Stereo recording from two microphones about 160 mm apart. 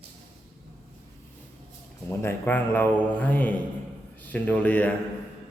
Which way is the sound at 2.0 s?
10° left (ahead or behind).